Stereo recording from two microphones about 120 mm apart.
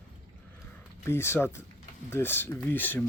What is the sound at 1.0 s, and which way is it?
Speech, 20° left (ahead or behind).